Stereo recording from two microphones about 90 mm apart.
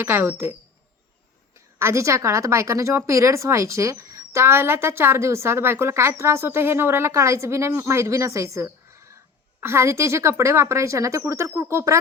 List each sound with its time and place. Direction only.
0.0 s speech: 30° right (ahead or behind)
1.8 s a woman's voice: 30° right (ahead or behind)